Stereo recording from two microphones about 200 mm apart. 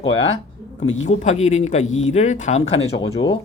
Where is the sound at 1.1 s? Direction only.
35° left (ahead or behind).